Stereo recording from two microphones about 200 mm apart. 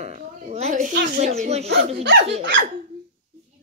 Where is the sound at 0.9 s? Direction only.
50° right (ahead or behind).